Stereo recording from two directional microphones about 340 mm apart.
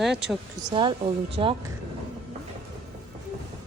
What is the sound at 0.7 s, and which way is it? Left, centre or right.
Speech, centre.